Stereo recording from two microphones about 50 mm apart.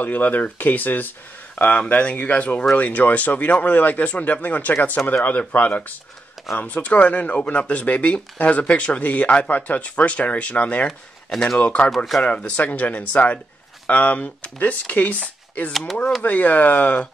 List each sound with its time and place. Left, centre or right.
0.0 s speech: left
10.9 s speech: centre
11.5 s speech: left